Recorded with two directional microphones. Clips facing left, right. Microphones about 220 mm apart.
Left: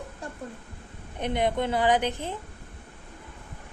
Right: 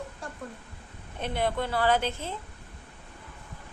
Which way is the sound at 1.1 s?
15° left (ahead or behind).